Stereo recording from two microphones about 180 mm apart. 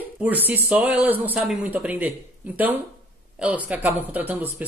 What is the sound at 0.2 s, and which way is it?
Speech, 10° right (ahead or behind).